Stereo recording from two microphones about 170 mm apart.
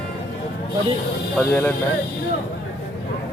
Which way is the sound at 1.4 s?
10° left (ahead or behind).